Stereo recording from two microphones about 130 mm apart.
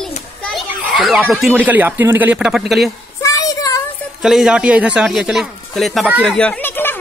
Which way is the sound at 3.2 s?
25° left (ahead or behind).